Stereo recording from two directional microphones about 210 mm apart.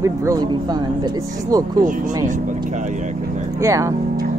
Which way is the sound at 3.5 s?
15° right (ahead or behind).